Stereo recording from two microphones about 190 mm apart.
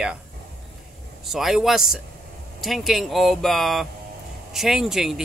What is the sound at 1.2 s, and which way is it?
Speech, centre (ahead or behind).